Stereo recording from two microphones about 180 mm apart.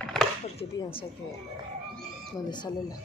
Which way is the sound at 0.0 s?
Centre (ahead or behind).